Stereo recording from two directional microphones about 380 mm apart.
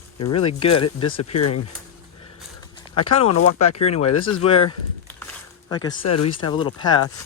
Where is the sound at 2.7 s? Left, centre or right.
Centre.